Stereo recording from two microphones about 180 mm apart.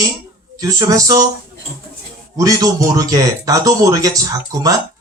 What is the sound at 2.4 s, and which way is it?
Speech, 20° right (ahead or behind).